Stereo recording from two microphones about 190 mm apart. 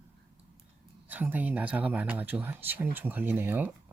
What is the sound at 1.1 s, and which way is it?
Speech, 10° right (ahead or behind).